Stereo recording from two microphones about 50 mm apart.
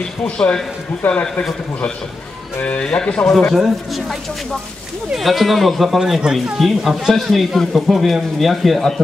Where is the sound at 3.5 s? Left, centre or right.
Centre.